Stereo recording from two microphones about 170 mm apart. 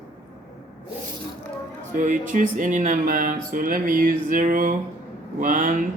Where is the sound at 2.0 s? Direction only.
50° right (ahead or behind).